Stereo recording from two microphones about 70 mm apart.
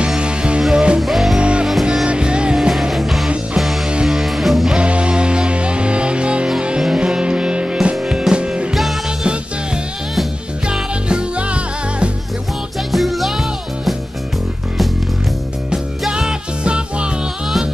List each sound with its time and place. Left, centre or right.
0.0 s music: centre
1.4 s music: centre
1.7 s music: centre
2.0 s music: centre
4.7 s music: centre
10.7 s music: centre
12.9 s music: centre
15.7 s music: centre